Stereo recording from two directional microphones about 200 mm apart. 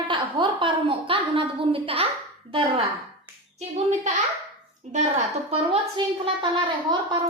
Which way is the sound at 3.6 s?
35° right (ahead or behind).